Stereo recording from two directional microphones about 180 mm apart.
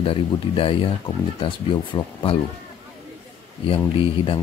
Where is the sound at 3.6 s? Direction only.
30° left (ahead or behind).